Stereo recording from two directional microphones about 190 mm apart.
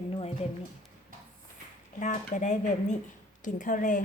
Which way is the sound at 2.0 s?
40° left (ahead or behind).